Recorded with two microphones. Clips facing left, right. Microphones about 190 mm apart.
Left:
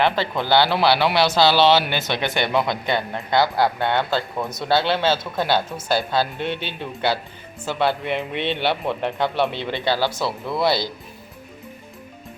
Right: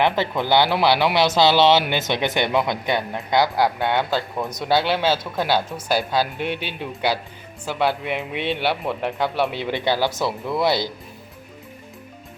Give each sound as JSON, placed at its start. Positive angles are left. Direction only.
{"t": 0.0, "sound": "speech", "side_deg": -15}